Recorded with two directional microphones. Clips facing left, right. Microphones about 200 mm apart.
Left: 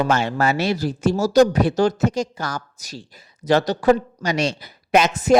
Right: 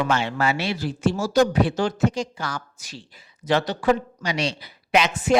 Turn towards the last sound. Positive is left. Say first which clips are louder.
# left 4 dB
turn(degrees=40)  # may be behind; listen again after turning